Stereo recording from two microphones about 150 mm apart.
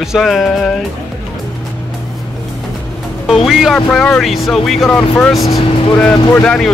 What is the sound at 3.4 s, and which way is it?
Speech, centre (ahead or behind).